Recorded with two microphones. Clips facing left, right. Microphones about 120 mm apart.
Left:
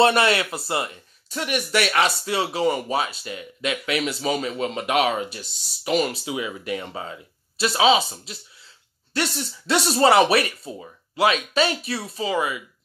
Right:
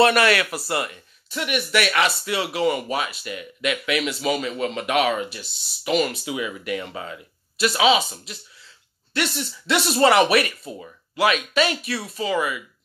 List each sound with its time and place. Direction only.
0.0 s speech: 25° left (ahead or behind)
1.3 s speech: 40° left (ahead or behind)